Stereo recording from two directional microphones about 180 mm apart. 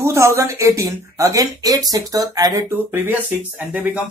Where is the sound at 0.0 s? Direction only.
15° right (ahead or behind).